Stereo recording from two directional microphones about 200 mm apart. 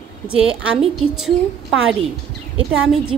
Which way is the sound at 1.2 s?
Centre (ahead or behind).